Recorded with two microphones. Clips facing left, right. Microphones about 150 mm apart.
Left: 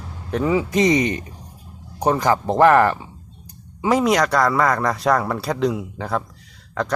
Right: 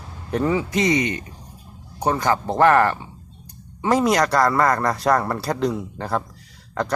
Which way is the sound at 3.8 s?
Centre (ahead or behind).